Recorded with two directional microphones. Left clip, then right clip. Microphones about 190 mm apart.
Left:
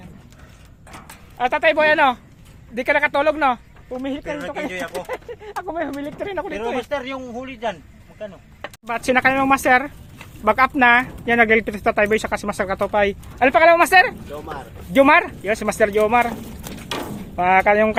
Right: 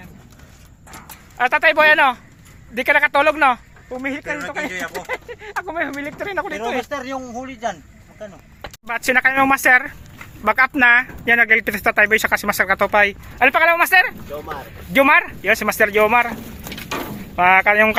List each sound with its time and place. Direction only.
1.4 s speech: 5° left (ahead or behind)
4.0 s speech: 15° left (ahead or behind)
8.9 s speech: centre (ahead or behind)
16.9 s a sound: 5° left (ahead or behind)